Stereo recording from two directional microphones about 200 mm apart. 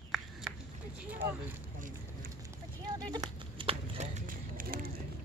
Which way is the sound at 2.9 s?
20° right (ahead or behind).